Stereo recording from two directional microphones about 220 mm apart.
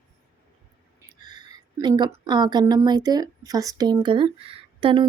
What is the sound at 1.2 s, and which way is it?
A woman's voice, 20° right (ahead or behind).